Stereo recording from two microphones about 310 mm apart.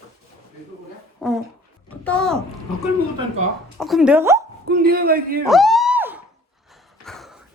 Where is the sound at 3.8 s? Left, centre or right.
Centre.